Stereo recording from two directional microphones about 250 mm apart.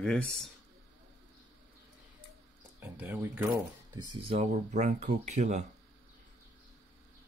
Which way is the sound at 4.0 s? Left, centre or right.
Right.